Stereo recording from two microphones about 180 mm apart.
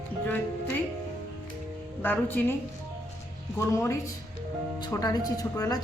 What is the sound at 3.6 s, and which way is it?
A woman's voice, 15° left (ahead or behind).